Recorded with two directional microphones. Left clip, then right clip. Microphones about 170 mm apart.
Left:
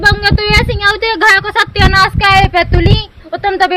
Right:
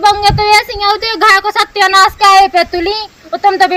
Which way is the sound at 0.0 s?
35° left (ahead or behind).